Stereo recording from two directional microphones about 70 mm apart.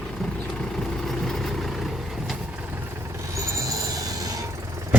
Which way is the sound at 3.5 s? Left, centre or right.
Right.